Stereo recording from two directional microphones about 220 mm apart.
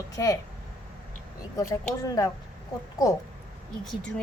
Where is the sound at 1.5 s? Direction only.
15° left (ahead or behind).